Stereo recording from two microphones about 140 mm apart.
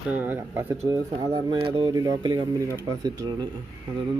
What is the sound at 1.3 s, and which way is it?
Speech, 35° right (ahead or behind).